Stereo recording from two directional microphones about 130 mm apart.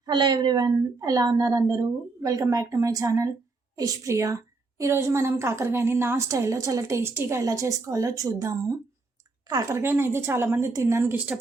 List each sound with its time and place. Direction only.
0.0 s a woman's voice: 35° right (ahead or behind); by 11.3 s 15° right (ahead or behind)